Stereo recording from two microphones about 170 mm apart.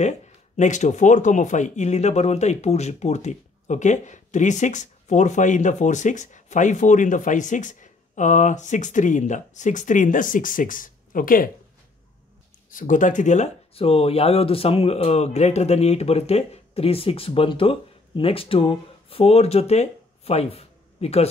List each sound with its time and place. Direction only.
0.6 s speech: 45° left (ahead or behind)
12.7 s speech: 50° left (ahead or behind)